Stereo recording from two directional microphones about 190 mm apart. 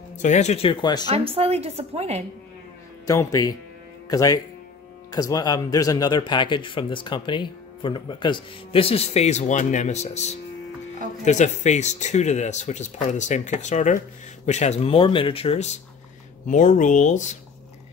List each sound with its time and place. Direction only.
0.2 s speech: 40° left (ahead or behind)
1.0 s a woman's voice: 30° right (ahead or behind)
3.1 s speech: 15° left (ahead or behind); by 17.4 s 40° left (ahead or behind)